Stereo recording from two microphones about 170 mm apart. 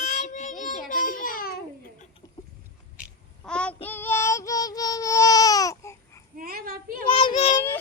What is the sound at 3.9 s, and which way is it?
Baby cry, 10° left (ahead or behind).